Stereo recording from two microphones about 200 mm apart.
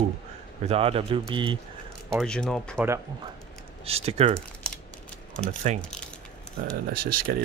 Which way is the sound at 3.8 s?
30° right (ahead or behind).